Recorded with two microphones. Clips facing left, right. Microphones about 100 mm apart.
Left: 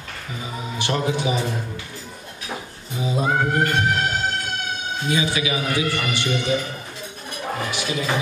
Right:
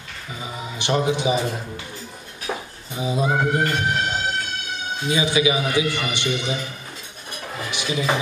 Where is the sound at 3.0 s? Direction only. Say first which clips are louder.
Right 1 dB; 20° right (ahead or behind).